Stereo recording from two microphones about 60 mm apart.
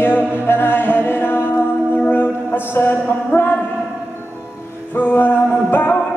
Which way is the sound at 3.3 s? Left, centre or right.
Left.